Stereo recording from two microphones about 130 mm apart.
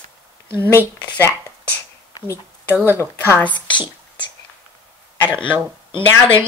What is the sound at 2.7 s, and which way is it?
Speech, 15° right (ahead or behind).